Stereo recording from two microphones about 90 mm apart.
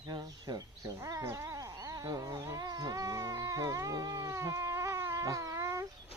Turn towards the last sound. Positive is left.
turn(degrees=-35)  # may be behind; listen again after turning